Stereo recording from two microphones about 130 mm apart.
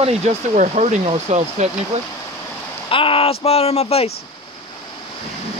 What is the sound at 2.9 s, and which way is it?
Speech, 45° left (ahead or behind).